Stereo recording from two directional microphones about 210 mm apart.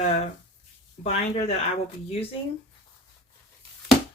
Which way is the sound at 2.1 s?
25° left (ahead or behind).